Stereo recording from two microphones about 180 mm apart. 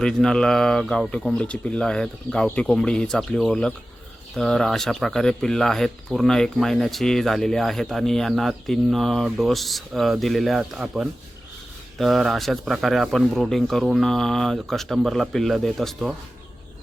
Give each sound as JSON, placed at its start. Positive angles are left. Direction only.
{"t": 0.0, "sound": "speech", "side_deg": 5}